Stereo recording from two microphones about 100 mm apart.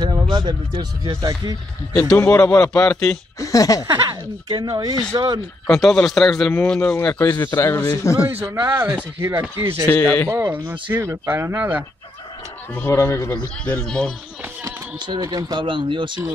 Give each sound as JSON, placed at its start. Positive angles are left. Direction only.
{"t": 0.0, "sound": "speech", "side_deg": -45}
{"t": 2.2, "sound": "a man's voice", "side_deg": 35}
{"t": 2.7, "sound": "a man's voice", "side_deg": 10}
{"t": 3.3, "sound": "a man's voice", "side_deg": 35}
{"t": 3.8, "sound": "speech", "side_deg": -45}
{"t": 5.7, "sound": "a man's voice", "side_deg": 5}
{"t": 7.2, "sound": "a man's voice", "side_deg": 30}
{"t": 8.2, "sound": "speech", "side_deg": -20}
{"t": 9.8, "sound": "a man's voice", "side_deg": 25}
{"t": 10.3, "sound": "speech", "side_deg": -25}
{"t": 12.9, "sound": "a man's voice", "side_deg": 30}
{"t": 13.7, "sound": "a man's voice", "side_deg": 10}
{"t": 15.0, "sound": "speech", "side_deg": -45}